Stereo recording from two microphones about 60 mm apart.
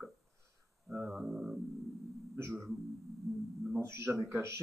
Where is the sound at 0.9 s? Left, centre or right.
Right.